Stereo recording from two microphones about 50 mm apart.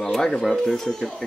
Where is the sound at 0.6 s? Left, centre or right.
Centre.